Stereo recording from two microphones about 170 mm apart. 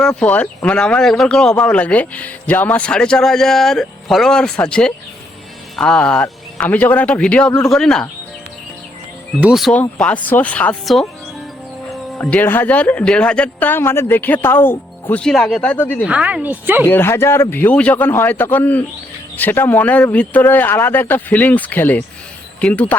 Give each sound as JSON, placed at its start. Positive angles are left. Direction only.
{"t": 0.0, "sound": "speech", "side_deg": 5}
{"t": 9.4, "sound": "speech", "side_deg": -5}
{"t": 12.1, "sound": "speech", "side_deg": 10}
{"t": 16.0, "sound": "a woman's voice", "side_deg": -5}
{"t": 16.8, "sound": "speech", "side_deg": 15}